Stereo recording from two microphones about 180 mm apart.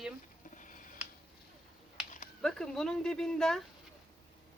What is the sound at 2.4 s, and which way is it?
Speech, 5° left (ahead or behind).